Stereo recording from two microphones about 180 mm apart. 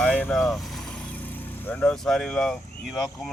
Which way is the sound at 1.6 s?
10° left (ahead or behind).